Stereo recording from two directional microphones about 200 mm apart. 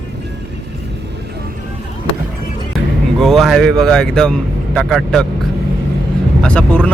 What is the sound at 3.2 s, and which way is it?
Speech, centre (ahead or behind).